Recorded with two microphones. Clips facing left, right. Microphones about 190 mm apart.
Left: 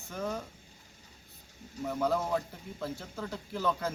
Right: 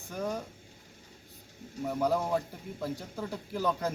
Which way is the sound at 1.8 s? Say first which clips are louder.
Right 1 dB; 10° right (ahead or behind).